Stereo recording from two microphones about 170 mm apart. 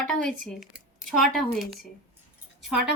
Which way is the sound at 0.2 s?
50° right (ahead or behind).